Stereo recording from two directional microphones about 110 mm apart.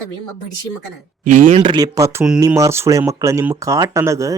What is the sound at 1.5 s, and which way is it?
Speech, 50° right (ahead or behind).